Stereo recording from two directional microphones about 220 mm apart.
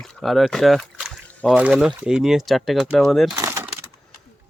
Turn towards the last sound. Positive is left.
turn(degrees=-15)  # may be behind; listen again after turning